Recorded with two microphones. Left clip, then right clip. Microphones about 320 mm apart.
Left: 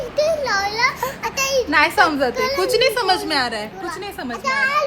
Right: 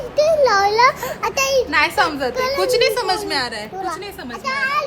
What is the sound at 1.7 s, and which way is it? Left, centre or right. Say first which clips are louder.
Speech: left 2 dB; centre.